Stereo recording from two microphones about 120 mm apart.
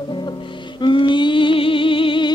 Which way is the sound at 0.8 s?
40° left (ahead or behind).